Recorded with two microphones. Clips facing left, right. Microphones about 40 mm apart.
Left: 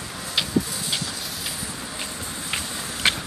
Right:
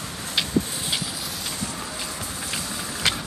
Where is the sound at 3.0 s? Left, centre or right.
Left.